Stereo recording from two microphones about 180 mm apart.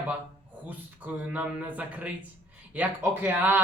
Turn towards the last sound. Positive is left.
turn(degrees=-10)  # may be behind; listen again after turning